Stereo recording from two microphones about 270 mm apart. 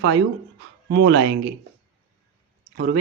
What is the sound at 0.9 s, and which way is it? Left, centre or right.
Speech, right.